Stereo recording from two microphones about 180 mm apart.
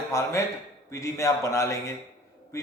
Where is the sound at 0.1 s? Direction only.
15° left (ahead or behind).